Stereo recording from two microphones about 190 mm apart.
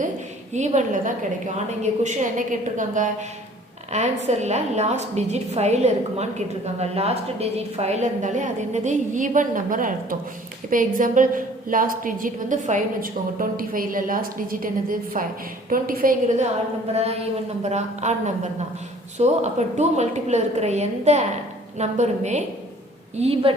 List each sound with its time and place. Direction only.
0.5 s a woman's voice: 40° right (ahead or behind)
16.9 s a woman's voice: 35° right (ahead or behind)
19.2 s a woman's voice: 35° right (ahead or behind)